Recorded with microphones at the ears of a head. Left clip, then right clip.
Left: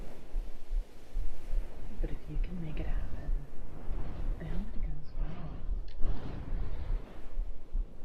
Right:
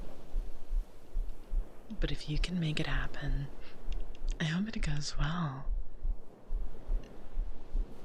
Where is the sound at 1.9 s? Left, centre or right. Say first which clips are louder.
Right 8 dB; right.